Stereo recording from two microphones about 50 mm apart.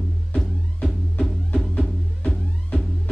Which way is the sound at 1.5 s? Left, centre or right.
Left.